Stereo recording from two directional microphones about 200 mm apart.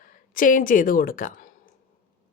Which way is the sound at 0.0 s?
40° left (ahead or behind).